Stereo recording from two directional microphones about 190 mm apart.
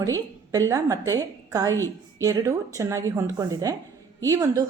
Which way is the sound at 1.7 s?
15° left (ahead or behind).